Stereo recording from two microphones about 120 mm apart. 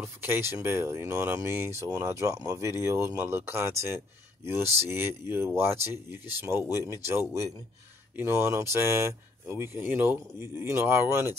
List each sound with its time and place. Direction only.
0.0 s speech: 20° right (ahead or behind)